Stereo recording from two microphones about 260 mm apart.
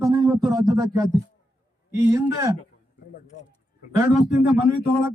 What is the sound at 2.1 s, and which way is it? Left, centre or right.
Speech, centre.